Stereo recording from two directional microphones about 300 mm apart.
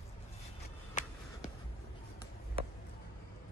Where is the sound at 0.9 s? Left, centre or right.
Left.